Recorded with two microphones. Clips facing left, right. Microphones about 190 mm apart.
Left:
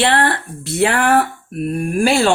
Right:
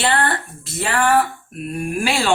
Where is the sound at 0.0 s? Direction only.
65° left (ahead or behind).